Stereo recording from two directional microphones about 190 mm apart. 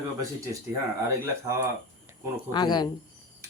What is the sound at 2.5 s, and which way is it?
Speech, 20° left (ahead or behind).